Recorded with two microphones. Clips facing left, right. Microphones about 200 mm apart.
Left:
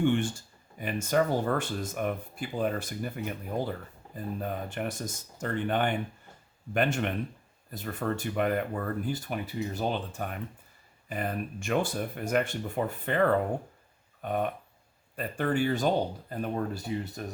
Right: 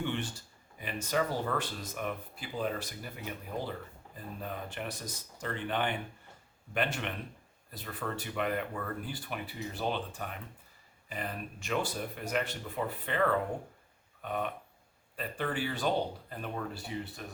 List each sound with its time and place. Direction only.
0.0 s speech: 50° left (ahead or behind)
4.1 s speech: 45° left (ahead or behind)
14.2 s a sound: 45° left (ahead or behind)
15.1 s speech: 45° left (ahead or behind)